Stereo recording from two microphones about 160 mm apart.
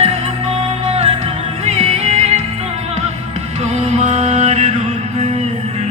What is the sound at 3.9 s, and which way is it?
Mantra, 45° right (ahead or behind).